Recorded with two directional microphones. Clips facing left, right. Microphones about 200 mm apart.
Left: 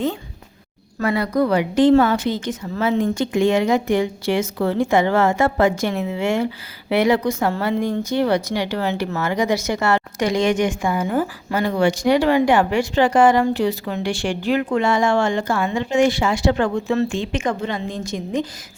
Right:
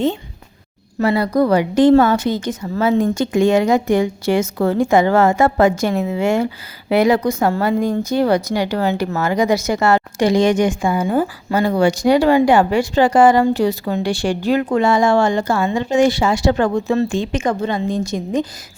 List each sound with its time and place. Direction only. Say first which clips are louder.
0.9 s speech: right 4 dB; 30° right (ahead or behind)
11.7 s speech: right 2 dB; 35° right (ahead or behind)